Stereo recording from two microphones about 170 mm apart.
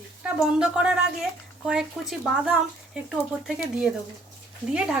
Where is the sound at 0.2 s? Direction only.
5° right (ahead or behind).